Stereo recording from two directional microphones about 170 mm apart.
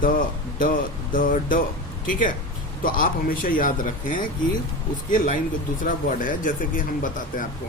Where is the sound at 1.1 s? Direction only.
50° left (ahead or behind).